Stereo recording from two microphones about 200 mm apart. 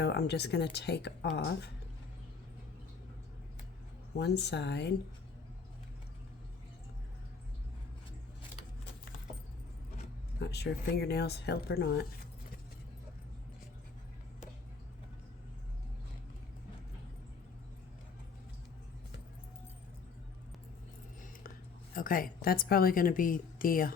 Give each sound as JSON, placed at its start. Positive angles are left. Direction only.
{"t": 0.0, "sound": "speech", "side_deg": 55}
{"t": 4.2, "sound": "speech", "side_deg": 55}
{"t": 10.4, "sound": "speech", "side_deg": 55}
{"t": 21.9, "sound": "a woman's voice", "side_deg": 45}